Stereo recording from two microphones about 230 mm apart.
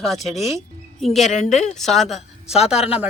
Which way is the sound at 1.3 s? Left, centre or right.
Left.